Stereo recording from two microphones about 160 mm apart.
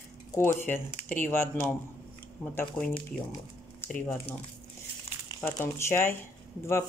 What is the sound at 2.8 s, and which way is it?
Speech, 15° left (ahead or behind).